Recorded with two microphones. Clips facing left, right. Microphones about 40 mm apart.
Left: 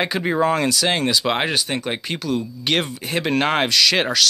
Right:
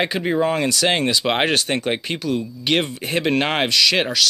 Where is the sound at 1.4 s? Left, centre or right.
Right.